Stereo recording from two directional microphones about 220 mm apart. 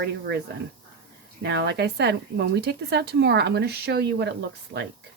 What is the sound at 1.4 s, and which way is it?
Speech, 50° right (ahead or behind).